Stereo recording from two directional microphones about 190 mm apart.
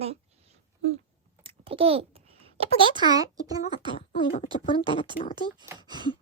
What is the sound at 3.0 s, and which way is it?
Speech, 20° right (ahead or behind).